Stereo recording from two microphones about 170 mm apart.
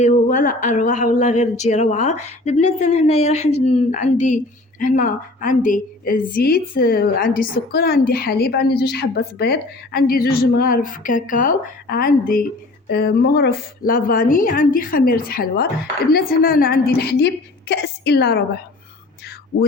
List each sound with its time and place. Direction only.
0.0 s a woman's voice: 50° left (ahead or behind)
12.9 s a woman's voice: 70° left (ahead or behind)